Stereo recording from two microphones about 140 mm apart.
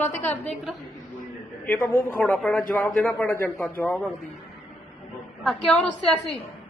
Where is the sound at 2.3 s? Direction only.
5° left (ahead or behind).